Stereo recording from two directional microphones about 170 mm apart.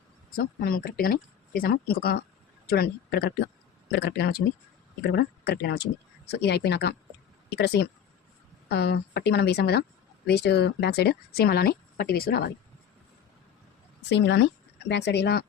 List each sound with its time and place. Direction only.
0.3 s speech: 60° left (ahead or behind)
14.1 s speech: 90° left; by 15.4 s 75° left (ahead or behind)